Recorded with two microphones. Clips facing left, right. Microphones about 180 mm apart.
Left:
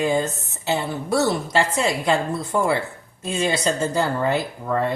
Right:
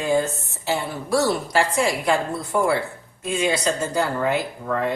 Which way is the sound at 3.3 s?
30° left (ahead or behind).